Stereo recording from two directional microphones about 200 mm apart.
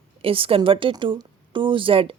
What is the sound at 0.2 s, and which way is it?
A woman's voice, 25° right (ahead or behind).